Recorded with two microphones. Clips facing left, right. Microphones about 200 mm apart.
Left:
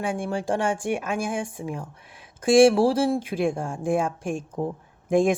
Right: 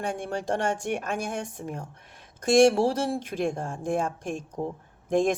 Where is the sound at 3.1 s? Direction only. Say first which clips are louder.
Left 4 dB; 5° left (ahead or behind).